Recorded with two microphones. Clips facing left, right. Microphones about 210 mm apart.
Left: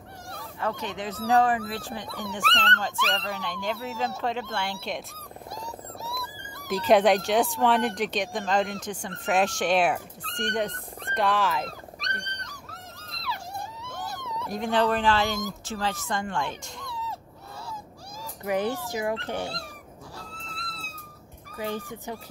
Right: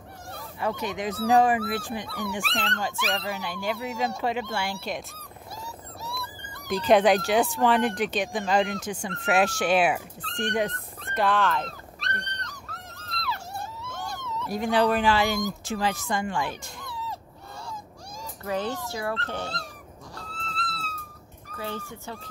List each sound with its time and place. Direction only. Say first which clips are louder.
0.6 s speech: right 2 dB; 10° right (ahead or behind)
2.0 s speech: right 2 dB; 20° left (ahead or behind)
2.3 s speech: left 4 dB; 10° right (ahead or behind)
11.1 s dog: right 1 dB; centre (ahead or behind)
13.2 s wail: right 1 dB; 10° left (ahead or behind)
14.4 s speech: right 2 dB; 5° right (ahead or behind)
18.4 s speech: left 2 dB; 15° left (ahead or behind)
20.2 s music: right 8 dB; 10° left (ahead or behind)
21.5 s speech: left 3 dB; 15° left (ahead or behind)